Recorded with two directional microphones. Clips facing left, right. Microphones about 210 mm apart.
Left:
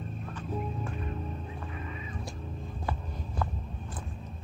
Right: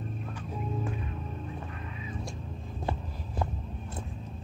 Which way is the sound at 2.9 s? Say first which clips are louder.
Right 2 dB; 25° right (ahead or behind).